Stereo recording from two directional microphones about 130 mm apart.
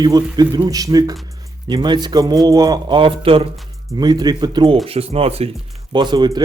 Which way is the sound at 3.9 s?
30° right (ahead or behind).